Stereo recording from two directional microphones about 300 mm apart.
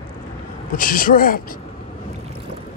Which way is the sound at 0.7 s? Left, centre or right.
Left.